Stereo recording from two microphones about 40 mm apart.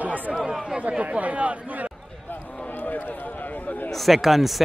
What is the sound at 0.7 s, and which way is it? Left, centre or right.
Speech, right.